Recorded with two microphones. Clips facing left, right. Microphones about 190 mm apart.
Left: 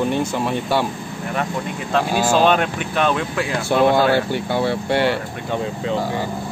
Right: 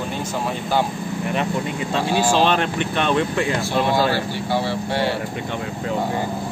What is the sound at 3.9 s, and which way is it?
Speech, 55° left (ahead or behind).